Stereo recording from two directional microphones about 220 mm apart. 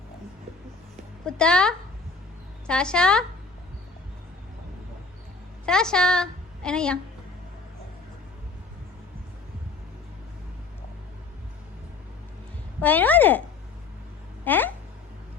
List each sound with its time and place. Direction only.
1.2 s speech: 5° left (ahead or behind)
5.6 s a woman's voice: 5° left (ahead or behind)
12.8 s speech: 5° left (ahead or behind)
14.4 s speech: 10° left (ahead or behind)